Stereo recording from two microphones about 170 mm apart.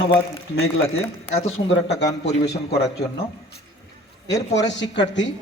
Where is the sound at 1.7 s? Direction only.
80° left.